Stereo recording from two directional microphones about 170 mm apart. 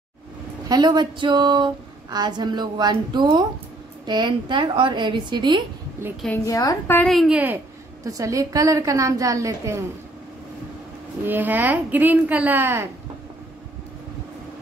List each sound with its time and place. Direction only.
0.7 s speech: 25° right (ahead or behind)
6.4 s a woman's voice: 20° left (ahead or behind)
7.0 s a woman's voice: centre (ahead or behind)
8.0 s speech: 20° right (ahead or behind)
11.2 s a woman's voice: 10° right (ahead or behind)